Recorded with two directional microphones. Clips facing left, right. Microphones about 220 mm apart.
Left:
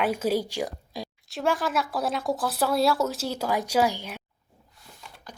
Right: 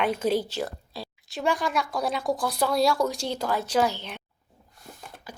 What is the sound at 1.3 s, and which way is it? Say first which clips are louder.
Speech: even; centre (ahead or behind).